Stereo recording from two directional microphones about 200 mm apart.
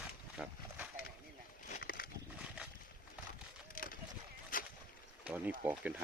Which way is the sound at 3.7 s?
45° left (ahead or behind).